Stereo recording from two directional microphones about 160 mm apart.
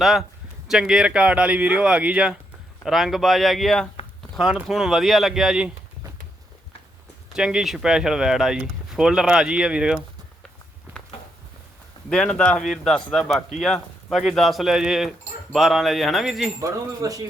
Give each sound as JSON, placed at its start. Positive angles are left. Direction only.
{"t": 0.0, "sound": "speech", "side_deg": 0}
{"t": 7.3, "sound": "speech", "side_deg": -5}
{"t": 12.1, "sound": "speech", "side_deg": 5}
{"t": 16.6, "sound": "speech", "side_deg": -20}